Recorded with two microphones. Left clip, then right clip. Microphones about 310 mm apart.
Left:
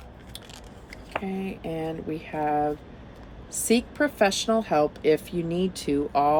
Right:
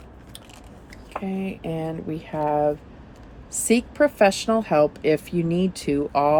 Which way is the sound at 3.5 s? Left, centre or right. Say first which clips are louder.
Right 3 dB; right.